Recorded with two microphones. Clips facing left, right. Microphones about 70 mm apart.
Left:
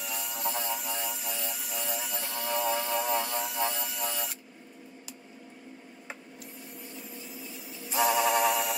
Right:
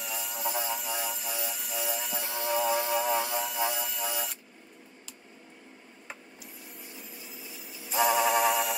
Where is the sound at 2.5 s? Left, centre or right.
Centre.